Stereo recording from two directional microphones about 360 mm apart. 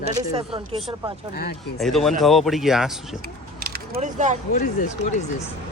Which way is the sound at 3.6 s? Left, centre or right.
Right.